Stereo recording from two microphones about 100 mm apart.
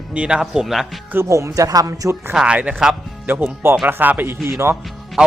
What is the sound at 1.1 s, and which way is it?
Speech, 30° right (ahead or behind).